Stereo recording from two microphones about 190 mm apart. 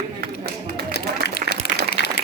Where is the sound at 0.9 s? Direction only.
60° left (ahead or behind).